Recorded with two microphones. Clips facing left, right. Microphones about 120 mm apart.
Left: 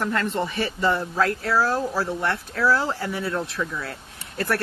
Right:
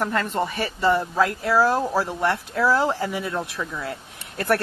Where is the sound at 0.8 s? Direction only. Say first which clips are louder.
Right 3 dB; 10° right (ahead or behind).